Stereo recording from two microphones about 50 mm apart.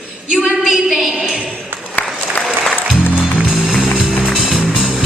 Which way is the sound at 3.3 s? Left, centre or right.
Centre.